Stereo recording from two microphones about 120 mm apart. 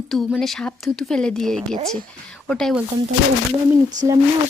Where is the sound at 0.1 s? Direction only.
Centre (ahead or behind).